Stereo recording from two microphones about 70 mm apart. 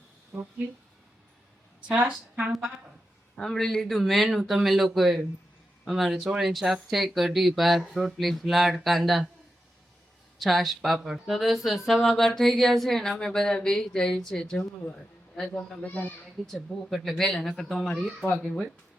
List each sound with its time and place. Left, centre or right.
0.3 s a woman's voice: centre
1.9 s a woman's voice: centre
2.5 s speech: centre
10.3 s a man's voice: centre
15.8 s speech: left
16.5 s speech: centre